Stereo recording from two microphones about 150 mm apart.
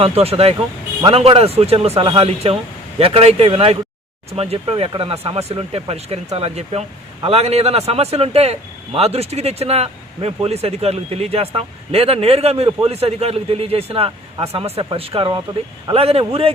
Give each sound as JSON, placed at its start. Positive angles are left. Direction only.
{"t": 0.0, "sound": "speech", "side_deg": -40}